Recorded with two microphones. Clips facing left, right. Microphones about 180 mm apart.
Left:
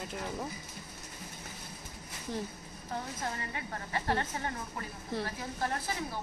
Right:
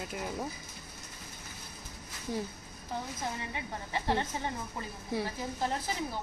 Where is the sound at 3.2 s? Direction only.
15° right (ahead or behind).